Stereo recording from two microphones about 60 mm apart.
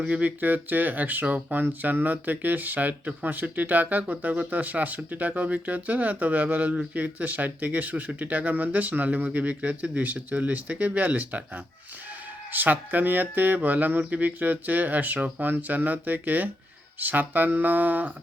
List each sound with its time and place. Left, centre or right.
0.0 s speech: right